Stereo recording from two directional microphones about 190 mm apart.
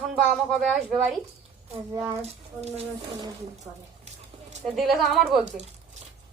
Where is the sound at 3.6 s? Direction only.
35° right (ahead or behind).